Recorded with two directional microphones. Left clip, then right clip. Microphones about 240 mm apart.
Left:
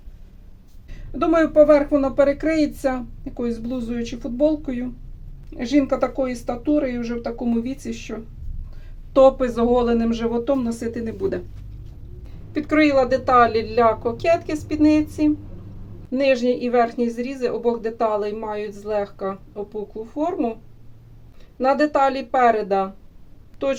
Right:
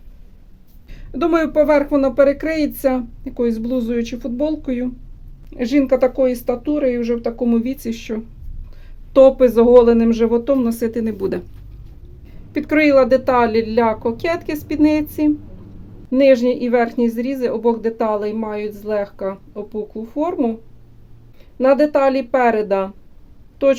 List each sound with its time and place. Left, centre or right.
0.9 s speech: right
12.5 s speech: right
21.6 s speech: right